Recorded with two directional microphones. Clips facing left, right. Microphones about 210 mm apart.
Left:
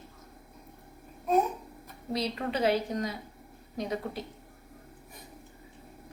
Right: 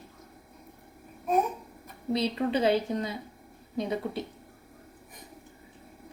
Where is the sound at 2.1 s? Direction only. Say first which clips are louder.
Right 4 dB; 25° right (ahead or behind).